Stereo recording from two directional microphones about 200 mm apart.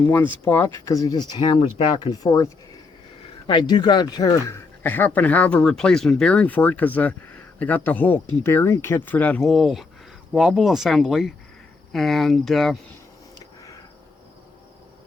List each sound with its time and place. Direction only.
0.0 s speech: 10° left (ahead or behind)